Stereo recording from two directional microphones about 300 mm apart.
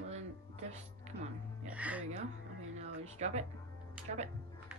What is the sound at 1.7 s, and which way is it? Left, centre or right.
Music, centre.